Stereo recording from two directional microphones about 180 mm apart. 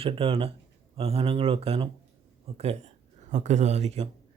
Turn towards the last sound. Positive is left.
turn(degrees=-35)  # may be behind; listen again after turning